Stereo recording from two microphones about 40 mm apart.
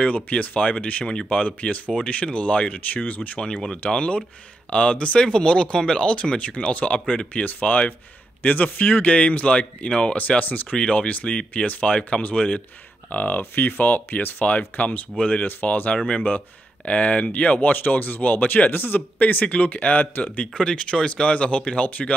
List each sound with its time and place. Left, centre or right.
0.0 s speech: left
1.0 s speech: left
1.4 s speech: left
3.4 s speech: left
10.4 s speech: left
10.8 s speech: left
13.1 s speech: left
15.1 s speech: left
15.4 s speech: left
18.7 s speech: left
19.1 s speech: left
20.5 s speech: left